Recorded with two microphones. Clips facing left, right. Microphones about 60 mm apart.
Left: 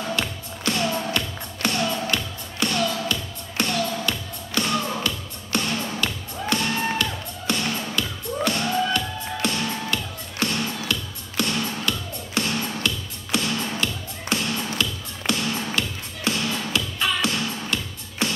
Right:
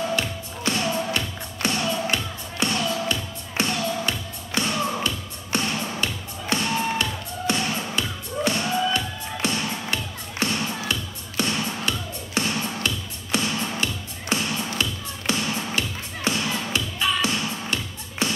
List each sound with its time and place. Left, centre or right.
0.7 s music: right